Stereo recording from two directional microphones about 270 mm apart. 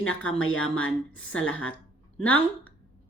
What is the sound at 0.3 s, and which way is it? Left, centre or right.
A woman's voice, left.